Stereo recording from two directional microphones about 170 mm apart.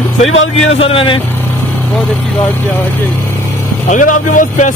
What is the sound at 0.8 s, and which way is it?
Speech, 35° left (ahead or behind).